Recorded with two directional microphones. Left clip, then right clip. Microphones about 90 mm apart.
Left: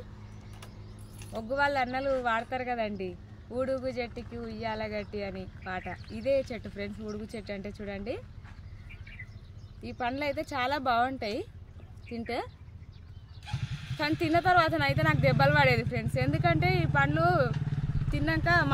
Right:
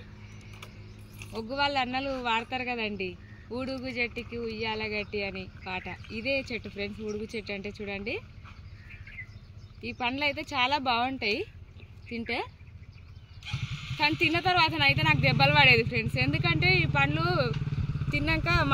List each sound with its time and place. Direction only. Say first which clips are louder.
1.5 s speech: even; 50° left (ahead or behind)
6.4 s speech: right 3 dB; 50° left (ahead or behind)
7.1 s speech: right 4 dB; 60° left (ahead or behind)
9.8 s speech: right 2 dB; 55° left (ahead or behind)
13.5 s a sound: right 4 dB; 25° left (ahead or behind)
14.2 s speech: left 2 dB; 65° left (ahead or behind)
17.6 s vehicle: even; 15° left (ahead or behind)
18.1 s speech: left 1 dB; 35° left (ahead or behind)